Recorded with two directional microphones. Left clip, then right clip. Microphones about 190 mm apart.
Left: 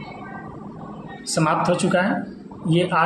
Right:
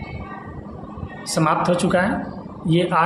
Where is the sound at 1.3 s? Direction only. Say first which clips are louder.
Right 1 dB; 15° right (ahead or behind).